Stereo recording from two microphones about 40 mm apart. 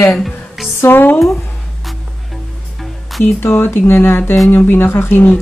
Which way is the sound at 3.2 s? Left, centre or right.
Left.